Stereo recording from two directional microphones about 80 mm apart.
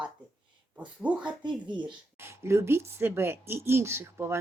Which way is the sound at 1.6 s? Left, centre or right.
Right.